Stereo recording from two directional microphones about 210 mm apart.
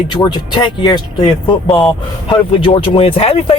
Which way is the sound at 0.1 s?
20° left (ahead or behind).